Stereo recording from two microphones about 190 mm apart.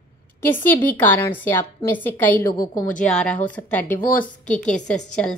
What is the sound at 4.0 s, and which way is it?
Speech, 45° left (ahead or behind).